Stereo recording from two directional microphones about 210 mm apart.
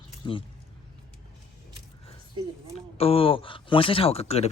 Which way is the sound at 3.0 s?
25° left (ahead or behind).